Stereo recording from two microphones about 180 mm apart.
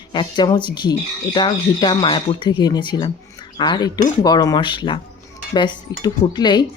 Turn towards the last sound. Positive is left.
turn(degrees=25)  # may be behind; listen again after turning